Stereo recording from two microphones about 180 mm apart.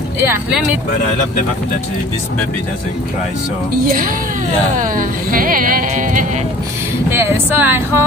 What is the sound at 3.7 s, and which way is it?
Speech, 50° right (ahead or behind).